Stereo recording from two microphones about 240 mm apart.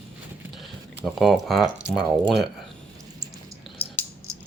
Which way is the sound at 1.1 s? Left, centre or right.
Centre.